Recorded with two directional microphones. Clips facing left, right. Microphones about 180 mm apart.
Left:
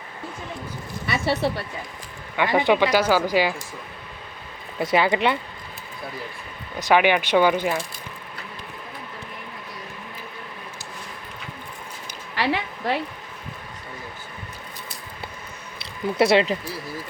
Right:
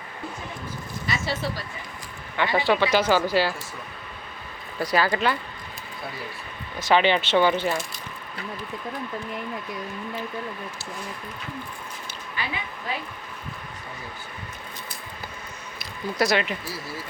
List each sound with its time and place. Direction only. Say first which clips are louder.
1.0 s speech: left 6 dB; 65° left (ahead or behind)
2.3 s speech: left 3 dB; 15° left (ahead or behind)
4.8 s speech: left 3 dB; 20° left (ahead or behind)
6.7 s speech: left 2 dB; 15° left (ahead or behind)
12.4 s a sound: left 9 dB; 80° left
16.1 s speech: left 5 dB; 25° left (ahead or behind)